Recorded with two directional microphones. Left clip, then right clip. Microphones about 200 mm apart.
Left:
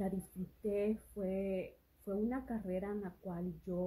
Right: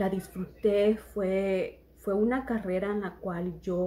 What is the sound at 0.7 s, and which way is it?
Speech, 5° right (ahead or behind).